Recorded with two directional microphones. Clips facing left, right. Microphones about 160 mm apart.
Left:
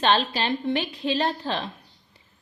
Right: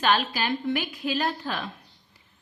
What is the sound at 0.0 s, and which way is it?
Speech, 30° left (ahead or behind).